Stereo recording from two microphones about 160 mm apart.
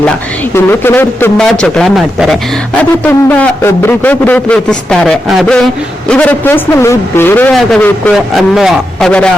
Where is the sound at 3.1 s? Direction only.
10° left (ahead or behind).